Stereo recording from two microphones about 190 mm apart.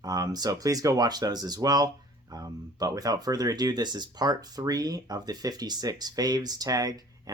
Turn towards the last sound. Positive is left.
turn(degrees=-20)  # may be behind; listen again after turning